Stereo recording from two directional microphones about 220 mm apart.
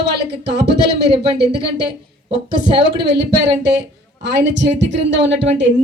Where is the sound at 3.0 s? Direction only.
50° right (ahead or behind).